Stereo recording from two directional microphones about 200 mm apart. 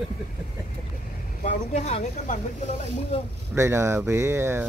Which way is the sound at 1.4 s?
35° left (ahead or behind).